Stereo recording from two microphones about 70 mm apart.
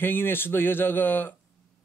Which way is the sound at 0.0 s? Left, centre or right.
Left.